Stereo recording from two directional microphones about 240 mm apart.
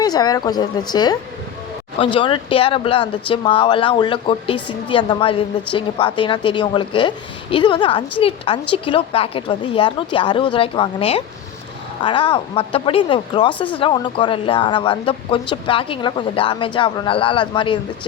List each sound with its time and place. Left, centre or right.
0.0 s speech: centre